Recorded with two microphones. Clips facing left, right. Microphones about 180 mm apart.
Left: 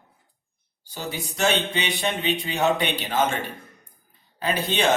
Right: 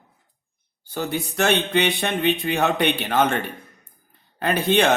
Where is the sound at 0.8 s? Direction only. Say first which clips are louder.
Right 6 dB; 55° right (ahead or behind).